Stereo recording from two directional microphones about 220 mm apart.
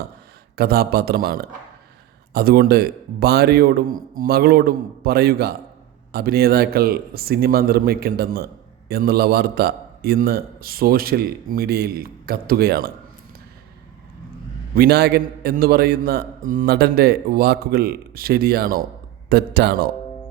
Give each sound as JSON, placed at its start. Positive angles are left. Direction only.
{"t": 0.5, "sound": "a man's voice", "side_deg": -45}
{"t": 14.8, "sound": "a man's voice", "side_deg": -45}